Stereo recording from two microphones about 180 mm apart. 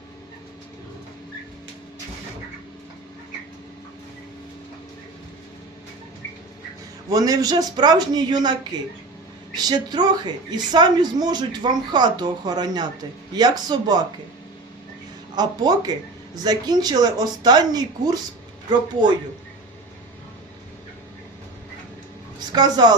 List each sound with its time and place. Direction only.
7.1 s a woman's voice: 20° right (ahead or behind)
9.6 s a woman's voice: 25° right (ahead or behind)
15.4 s a woman's voice: 20° right (ahead or behind)
22.5 s a woman's voice: 20° right (ahead or behind)